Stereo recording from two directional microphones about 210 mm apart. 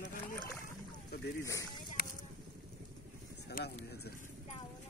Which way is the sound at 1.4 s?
15° left (ahead or behind).